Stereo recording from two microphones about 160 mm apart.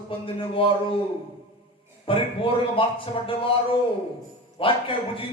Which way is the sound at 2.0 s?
35° left (ahead or behind).